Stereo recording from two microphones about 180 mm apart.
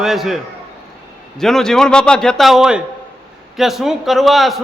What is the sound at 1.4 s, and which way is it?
A man's voice, centre (ahead or behind).